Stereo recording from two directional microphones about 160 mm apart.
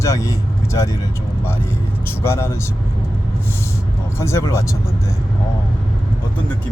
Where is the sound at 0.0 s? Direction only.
20° left (ahead or behind).